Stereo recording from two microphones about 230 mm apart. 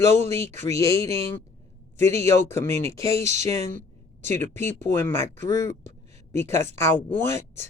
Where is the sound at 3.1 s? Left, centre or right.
Right.